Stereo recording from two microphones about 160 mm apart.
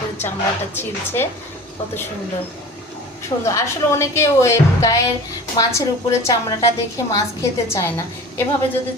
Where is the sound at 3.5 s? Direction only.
15° left (ahead or behind).